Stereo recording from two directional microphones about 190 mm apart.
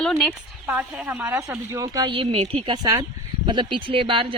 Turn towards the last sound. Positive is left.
turn(degrees=-25)  # may be behind; listen again after turning